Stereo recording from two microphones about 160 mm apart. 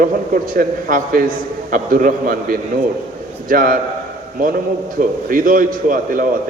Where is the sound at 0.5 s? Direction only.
60° right (ahead or behind).